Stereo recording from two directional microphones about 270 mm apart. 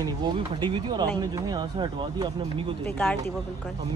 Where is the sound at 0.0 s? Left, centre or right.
Centre.